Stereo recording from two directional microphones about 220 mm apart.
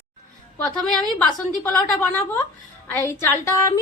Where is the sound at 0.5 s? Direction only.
5° left (ahead or behind).